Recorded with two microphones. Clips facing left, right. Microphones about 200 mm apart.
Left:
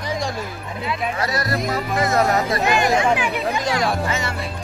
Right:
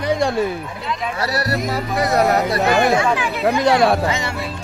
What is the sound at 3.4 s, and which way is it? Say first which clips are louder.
Speech: right 7 dB; 65° right (ahead or behind).